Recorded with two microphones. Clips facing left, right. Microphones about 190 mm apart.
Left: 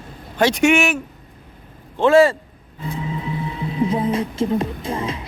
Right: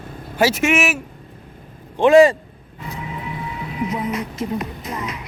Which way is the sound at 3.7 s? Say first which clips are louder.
Left 4 dB; 30° left (ahead or behind).